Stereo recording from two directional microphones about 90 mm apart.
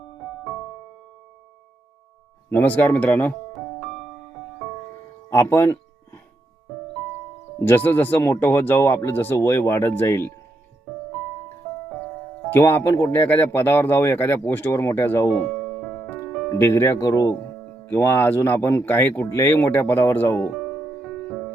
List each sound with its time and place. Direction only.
2.5 s speech: 20° left (ahead or behind)
3.5 s music: centre (ahead or behind)
5.3 s music: 25° left (ahead or behind)
7.6 s speech: 20° left (ahead or behind)
12.5 s speech: 25° left (ahead or behind)
15.5 s music: centre (ahead or behind)
16.5 s speech: 30° left (ahead or behind)
17.8 s speech: 25° left (ahead or behind)
20.6 s music: 5° left (ahead or behind)